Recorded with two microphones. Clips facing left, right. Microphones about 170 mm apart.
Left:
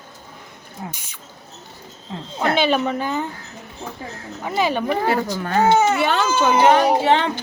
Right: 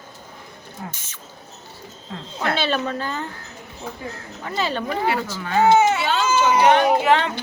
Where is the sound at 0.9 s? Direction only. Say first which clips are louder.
Left 2 dB; 15° left (ahead or behind).